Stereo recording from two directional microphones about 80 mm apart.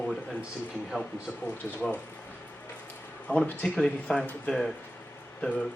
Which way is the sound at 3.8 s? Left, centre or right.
Centre.